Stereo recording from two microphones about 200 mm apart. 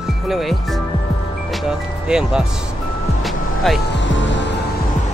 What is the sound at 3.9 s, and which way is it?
Music, 65° left (ahead or behind).